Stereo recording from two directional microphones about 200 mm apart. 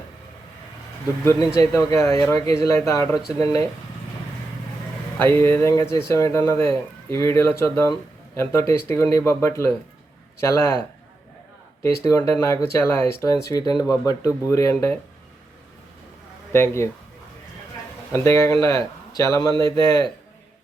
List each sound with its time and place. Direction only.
1.2 s speech: 15° left (ahead or behind)
5.2 s speech: 10° left (ahead or behind)
12.0 s speech: 15° left (ahead or behind)
16.5 s speech: 10° left (ahead or behind)
18.1 s a man's voice: 15° left (ahead or behind)